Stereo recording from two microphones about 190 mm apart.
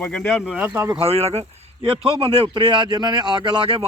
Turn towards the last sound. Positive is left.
turn(degrees=-30)  # may be behind; listen again after turning